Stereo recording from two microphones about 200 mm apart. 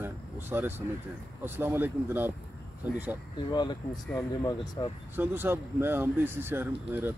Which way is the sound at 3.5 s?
20° left (ahead or behind).